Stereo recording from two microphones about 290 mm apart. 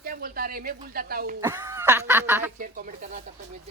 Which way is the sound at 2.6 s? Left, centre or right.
Right.